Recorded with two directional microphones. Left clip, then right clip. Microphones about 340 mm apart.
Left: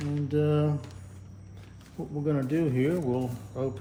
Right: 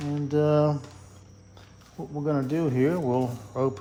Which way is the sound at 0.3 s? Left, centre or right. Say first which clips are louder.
Right 5 dB; centre.